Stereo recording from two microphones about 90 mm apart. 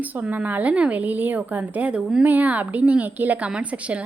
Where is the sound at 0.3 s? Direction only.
15° right (ahead or behind).